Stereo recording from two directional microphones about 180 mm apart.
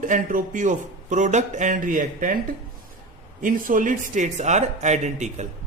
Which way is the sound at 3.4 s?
50° right (ahead or behind).